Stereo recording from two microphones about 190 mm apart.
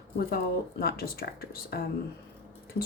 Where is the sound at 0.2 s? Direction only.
50° left (ahead or behind).